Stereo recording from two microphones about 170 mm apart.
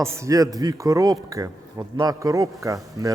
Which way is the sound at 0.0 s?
15° right (ahead or behind).